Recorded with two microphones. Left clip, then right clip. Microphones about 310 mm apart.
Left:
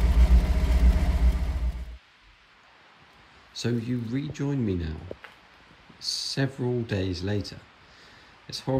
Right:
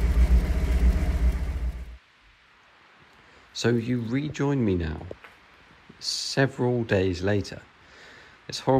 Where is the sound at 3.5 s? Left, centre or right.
Centre.